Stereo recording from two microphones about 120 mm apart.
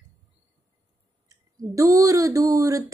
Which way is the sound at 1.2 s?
30° right (ahead or behind).